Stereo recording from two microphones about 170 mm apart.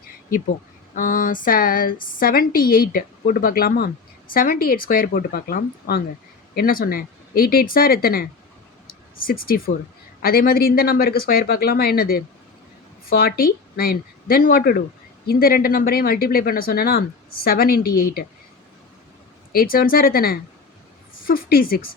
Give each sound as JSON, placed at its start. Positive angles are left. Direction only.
{"t": 0.9, "sound": "speech", "side_deg": 55}
{"t": 19.5, "sound": "speech", "side_deg": 60}